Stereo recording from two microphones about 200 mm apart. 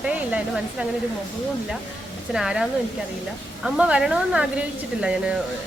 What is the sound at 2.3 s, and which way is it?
A woman's voice, 5° right (ahead or behind).